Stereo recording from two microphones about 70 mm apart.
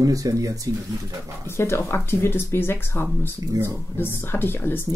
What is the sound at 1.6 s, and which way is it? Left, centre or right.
Speech, left.